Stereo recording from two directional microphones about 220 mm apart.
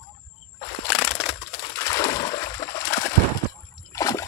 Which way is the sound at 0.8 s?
5° left (ahead or behind).